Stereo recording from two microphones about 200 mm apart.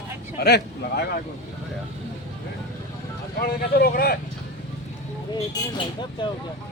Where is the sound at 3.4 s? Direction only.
50° left (ahead or behind).